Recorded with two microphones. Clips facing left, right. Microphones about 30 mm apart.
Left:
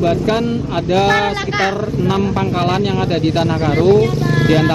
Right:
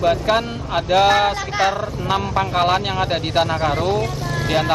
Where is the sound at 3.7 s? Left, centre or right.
Centre.